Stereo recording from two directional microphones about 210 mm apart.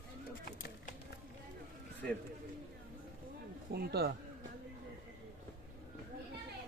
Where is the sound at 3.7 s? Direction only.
50° right (ahead or behind).